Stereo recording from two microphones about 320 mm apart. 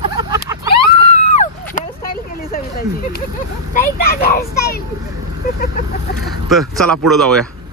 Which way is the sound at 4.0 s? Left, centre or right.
Left.